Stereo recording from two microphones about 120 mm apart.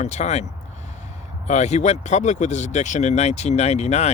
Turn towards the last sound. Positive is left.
turn(degrees=65)  # may be behind; listen again after turning